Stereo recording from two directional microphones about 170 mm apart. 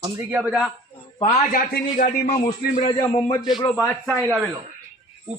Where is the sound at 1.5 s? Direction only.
55° left (ahead or behind).